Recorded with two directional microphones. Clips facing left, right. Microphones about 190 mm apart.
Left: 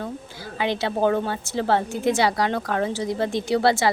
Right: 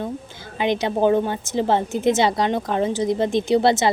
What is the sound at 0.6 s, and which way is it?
A woman's voice, 20° right (ahead or behind).